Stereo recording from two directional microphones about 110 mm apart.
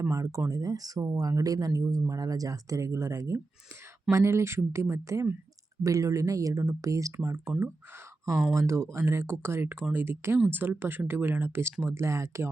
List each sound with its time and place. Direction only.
0.0 s speech: 25° right (ahead or behind)
8.5 s speech: 25° right (ahead or behind)